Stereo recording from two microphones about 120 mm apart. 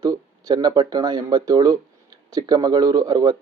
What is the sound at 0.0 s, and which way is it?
Speech, 30° right (ahead or behind).